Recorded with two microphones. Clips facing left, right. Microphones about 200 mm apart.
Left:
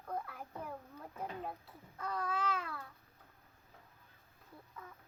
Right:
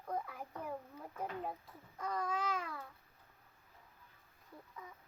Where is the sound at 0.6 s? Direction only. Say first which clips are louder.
Right 2 dB; 10° right (ahead or behind).